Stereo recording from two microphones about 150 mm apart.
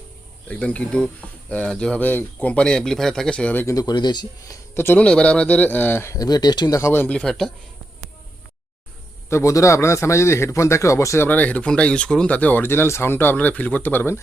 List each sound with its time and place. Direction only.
0.4 s a man's voice: 10° left (ahead or behind)
3.8 s speech: 30° left (ahead or behind)
4.7 s a man's voice: 15° left (ahead or behind)
9.3 s a man's voice: 20° left (ahead or behind)